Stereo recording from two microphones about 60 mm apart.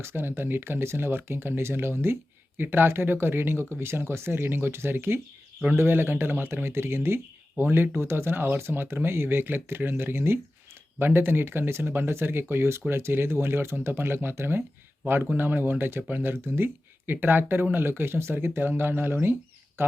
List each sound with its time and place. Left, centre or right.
0.0 s speech: right